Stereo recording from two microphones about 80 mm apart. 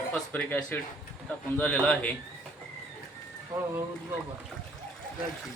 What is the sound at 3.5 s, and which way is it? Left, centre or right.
Speech, right.